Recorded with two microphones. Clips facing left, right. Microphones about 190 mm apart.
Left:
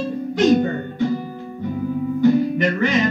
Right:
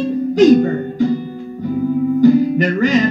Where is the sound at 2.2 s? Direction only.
40° right (ahead or behind).